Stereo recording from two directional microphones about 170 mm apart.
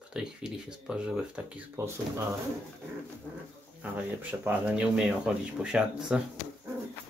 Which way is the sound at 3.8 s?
10° right (ahead or behind).